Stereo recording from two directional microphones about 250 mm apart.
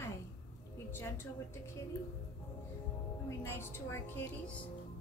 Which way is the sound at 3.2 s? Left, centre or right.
Centre.